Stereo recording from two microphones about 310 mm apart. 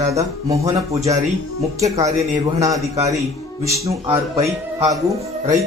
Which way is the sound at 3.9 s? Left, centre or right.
Centre.